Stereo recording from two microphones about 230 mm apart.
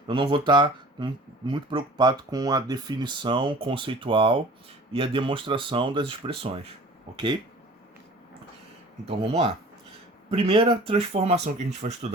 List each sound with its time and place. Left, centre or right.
0.1 s speech: right
9.0 s speech: right